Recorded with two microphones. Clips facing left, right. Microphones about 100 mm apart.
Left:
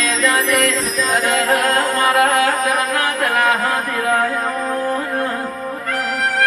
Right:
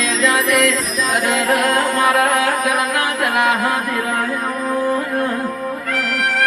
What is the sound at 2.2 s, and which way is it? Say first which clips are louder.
Music: left 1 dB; 35° left (ahead or behind).